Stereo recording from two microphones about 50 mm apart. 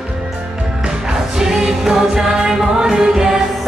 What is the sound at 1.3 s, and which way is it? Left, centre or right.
Music, centre.